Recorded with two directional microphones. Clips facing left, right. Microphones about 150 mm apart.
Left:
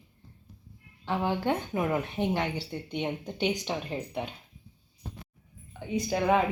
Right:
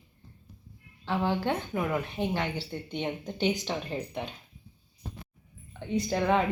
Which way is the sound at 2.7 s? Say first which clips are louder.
Left 1 dB; 10° left (ahead or behind).